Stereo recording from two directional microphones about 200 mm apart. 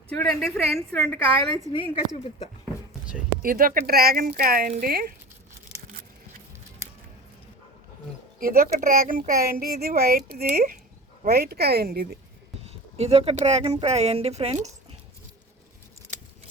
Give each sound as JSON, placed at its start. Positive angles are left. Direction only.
{"t": 0.2, "sound": "a woman's voice", "side_deg": 0}
{"t": 1.7, "sound": "speech", "side_deg": 25}
{"t": 3.4, "sound": "speech", "side_deg": -45}
{"t": 8.4, "sound": "speech", "side_deg": -45}
{"t": 12.6, "sound": "speech", "side_deg": -30}